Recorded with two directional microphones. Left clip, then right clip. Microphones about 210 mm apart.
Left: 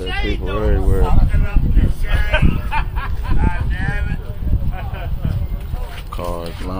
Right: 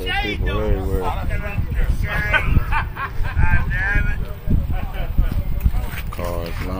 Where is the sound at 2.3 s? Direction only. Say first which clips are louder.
Left 1 dB; 50° right (ahead or behind).